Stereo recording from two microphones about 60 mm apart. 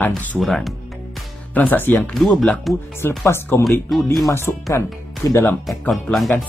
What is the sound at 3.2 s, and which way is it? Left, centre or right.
Speech, left.